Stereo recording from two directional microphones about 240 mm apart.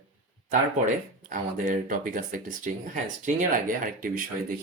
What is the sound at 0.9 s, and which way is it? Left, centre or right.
Speech, right.